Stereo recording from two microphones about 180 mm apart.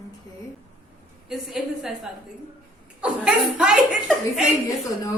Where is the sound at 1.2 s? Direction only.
Centre (ahead or behind).